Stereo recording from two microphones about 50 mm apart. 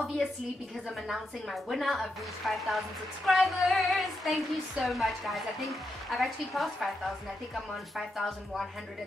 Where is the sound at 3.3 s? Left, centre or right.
Centre.